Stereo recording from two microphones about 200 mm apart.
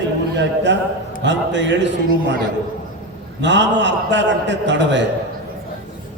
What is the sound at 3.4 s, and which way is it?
A man's voice, 60° right (ahead or behind).